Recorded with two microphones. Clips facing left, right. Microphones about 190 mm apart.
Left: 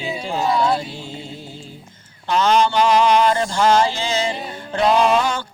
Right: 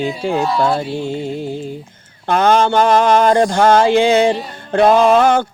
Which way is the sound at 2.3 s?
55° right (ahead or behind).